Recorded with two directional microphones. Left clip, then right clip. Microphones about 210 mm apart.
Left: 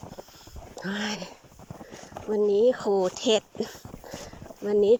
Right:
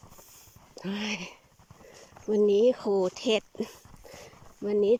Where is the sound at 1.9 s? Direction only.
55° left (ahead or behind).